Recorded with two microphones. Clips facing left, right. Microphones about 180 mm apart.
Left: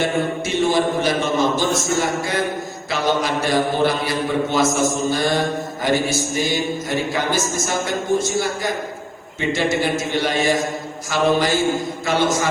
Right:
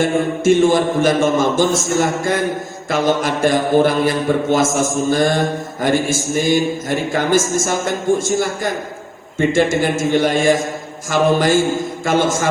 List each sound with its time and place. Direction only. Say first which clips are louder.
0.0 s speech: right 5 dB; 50° right (ahead or behind)